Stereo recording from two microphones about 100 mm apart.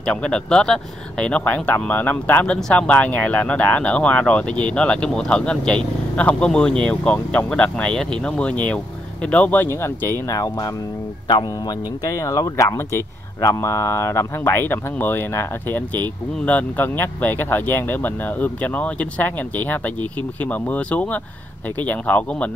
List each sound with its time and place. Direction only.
0.0 s speech: 10° left (ahead or behind); by 10.1 s 25° left (ahead or behind)
10.2 s speech: 35° left (ahead or behind)
11.2 s speech: 50° left (ahead or behind)
12.0 s speech: 35° left (ahead or behind); by 22.2 s 15° left (ahead or behind)